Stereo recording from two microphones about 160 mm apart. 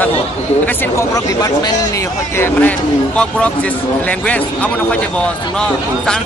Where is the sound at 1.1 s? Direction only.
25° left (ahead or behind).